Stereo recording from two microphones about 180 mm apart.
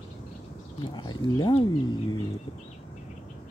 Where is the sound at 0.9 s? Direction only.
25° left (ahead or behind).